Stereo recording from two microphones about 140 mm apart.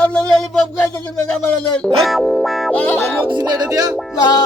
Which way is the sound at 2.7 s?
10° left (ahead or behind).